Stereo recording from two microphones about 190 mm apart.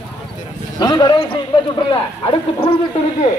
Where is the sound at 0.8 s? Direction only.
20° left (ahead or behind).